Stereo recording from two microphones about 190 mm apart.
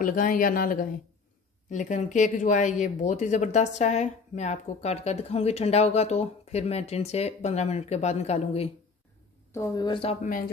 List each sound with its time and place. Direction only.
0.0 s speech: 45° left (ahead or behind)
9.5 s speech: 15° left (ahead or behind)